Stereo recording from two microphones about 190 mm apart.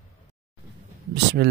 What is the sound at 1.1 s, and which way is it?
Speech, 60° right (ahead or behind).